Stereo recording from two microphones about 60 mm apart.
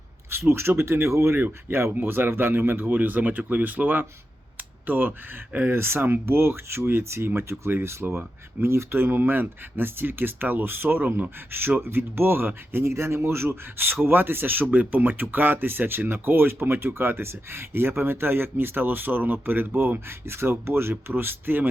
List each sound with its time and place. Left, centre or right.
0.3 s a man's voice: right
1.4 s speech: right
4.5 s a sound: right
5.5 s speech: right
5.7 s speech: right